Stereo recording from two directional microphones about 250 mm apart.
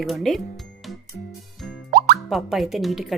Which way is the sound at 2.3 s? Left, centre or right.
Centre.